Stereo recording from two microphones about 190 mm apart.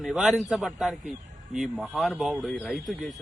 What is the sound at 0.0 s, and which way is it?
Speech, centre (ahead or behind).